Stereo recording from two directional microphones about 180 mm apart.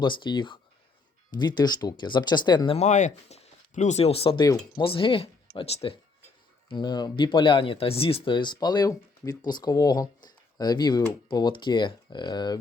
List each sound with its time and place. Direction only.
0.0 s speech: 25° left (ahead or behind)
2.7 s speech: 40° left (ahead or behind); by 12.5 s 25° left (ahead or behind)